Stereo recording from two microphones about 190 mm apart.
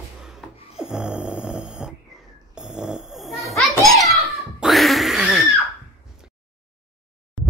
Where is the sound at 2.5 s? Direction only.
5° right (ahead or behind).